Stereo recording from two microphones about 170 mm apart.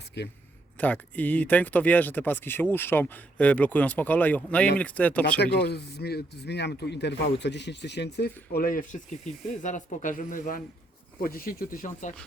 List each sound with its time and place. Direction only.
0.8 s speech: 10° left (ahead or behind)
5.4 s speech: 75° left (ahead or behind); by 12.1 s 50° left (ahead or behind)